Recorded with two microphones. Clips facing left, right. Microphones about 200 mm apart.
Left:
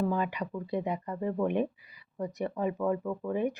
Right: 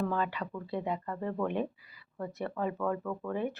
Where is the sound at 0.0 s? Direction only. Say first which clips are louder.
Left 2 dB; 15° left (ahead or behind).